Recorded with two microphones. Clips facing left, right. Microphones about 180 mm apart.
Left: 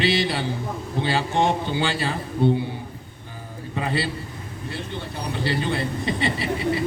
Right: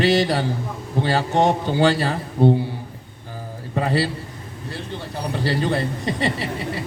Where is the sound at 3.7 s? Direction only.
40° right (ahead or behind).